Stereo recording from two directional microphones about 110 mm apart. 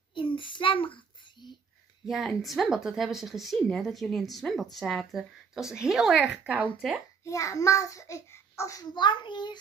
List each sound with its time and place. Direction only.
0.1 s child singing: 50° left (ahead or behind)
2.0 s a woman's voice: centre (ahead or behind)
7.2 s a child's voice: 30° left (ahead or behind)
8.9 s a child's voice: 45° left (ahead or behind)